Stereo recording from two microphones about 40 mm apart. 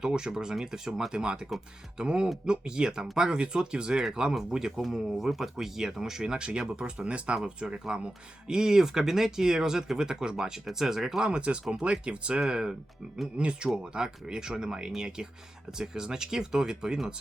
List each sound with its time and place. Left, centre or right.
0.0 s speech: centre
4.8 s speech: centre; by 8.1 s right
8.4 s speech: centre
11.3 s speech: right
12.4 s speech: centre